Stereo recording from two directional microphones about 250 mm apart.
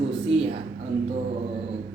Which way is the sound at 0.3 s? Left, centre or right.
Right.